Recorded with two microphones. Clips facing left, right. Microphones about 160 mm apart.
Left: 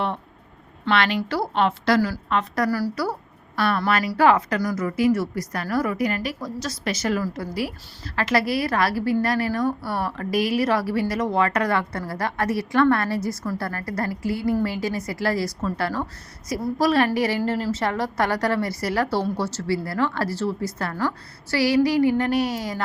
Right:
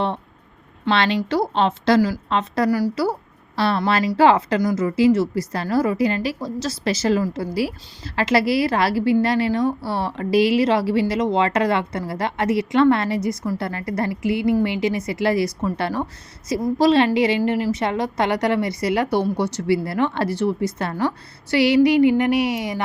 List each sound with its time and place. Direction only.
0.9 s a woman's voice: 25° right (ahead or behind)